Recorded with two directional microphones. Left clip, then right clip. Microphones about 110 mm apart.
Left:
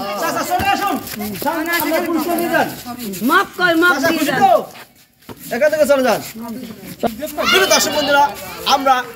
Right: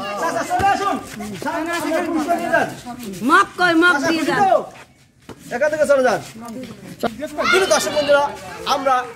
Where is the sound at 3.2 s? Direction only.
25° right (ahead or behind).